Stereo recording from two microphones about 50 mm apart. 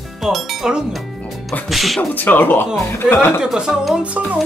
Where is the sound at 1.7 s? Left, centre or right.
Centre.